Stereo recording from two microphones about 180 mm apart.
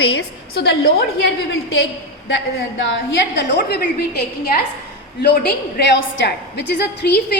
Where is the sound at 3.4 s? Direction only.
75° left (ahead or behind).